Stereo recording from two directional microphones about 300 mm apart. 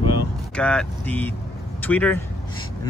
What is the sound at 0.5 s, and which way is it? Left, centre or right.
Speech, centre.